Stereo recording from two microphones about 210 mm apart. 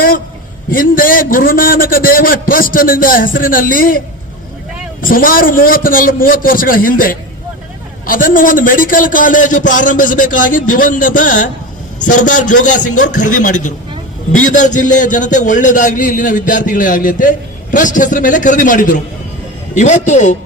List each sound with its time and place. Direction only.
0.7 s a man's voice: 40° left (ahead or behind)
5.0 s a man's voice: 40° left (ahead or behind)